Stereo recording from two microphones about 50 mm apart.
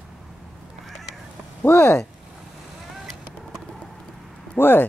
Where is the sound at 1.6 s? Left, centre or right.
Left.